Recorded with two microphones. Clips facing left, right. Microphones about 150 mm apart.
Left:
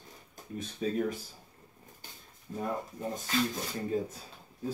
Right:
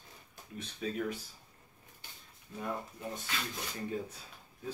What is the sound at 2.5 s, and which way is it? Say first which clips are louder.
Speech: left 4 dB; 40° left (ahead or behind).